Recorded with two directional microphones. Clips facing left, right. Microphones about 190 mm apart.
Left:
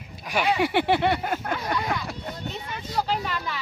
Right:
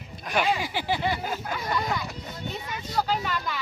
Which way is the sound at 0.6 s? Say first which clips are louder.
Left 7 dB; 65° left (ahead or behind).